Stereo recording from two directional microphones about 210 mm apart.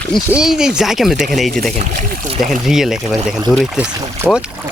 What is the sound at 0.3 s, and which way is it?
Speech, 5° right (ahead or behind).